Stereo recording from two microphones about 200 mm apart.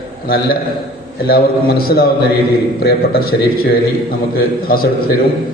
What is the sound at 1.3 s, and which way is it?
Speech, 50° left (ahead or behind).